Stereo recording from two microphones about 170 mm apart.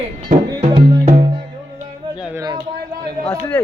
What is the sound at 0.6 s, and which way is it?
Music, 35° right (ahead or behind).